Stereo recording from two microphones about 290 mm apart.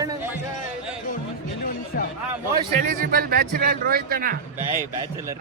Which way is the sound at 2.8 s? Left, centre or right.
Right.